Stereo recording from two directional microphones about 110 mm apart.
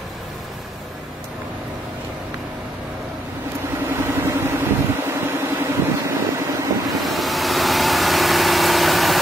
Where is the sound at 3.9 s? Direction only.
25° right (ahead or behind).